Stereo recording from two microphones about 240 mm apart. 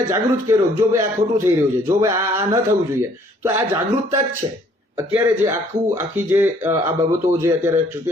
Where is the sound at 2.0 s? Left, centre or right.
Centre.